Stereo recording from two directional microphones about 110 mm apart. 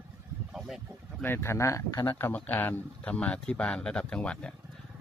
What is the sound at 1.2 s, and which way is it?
Speech, 20° left (ahead or behind).